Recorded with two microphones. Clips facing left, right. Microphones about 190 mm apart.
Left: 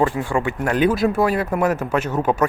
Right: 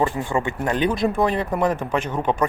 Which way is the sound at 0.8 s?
5° left (ahead or behind).